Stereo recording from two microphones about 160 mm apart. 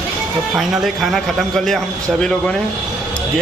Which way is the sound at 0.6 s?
Centre (ahead or behind).